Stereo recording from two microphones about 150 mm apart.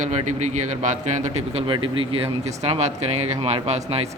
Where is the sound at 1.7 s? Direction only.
35° right (ahead or behind).